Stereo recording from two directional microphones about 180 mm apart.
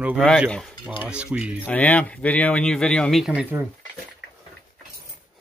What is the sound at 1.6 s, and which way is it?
Speech, 10° left (ahead or behind).